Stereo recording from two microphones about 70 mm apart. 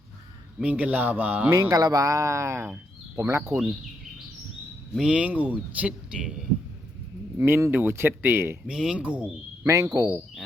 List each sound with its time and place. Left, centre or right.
0.6 s speech: centre
1.7 s speech: right
4.9 s speech: centre
7.3 s speech: right
8.6 s speech: centre
9.6 s speech: right